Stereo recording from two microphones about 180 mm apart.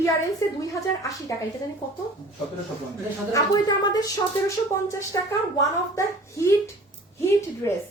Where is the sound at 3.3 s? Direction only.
20° left (ahead or behind).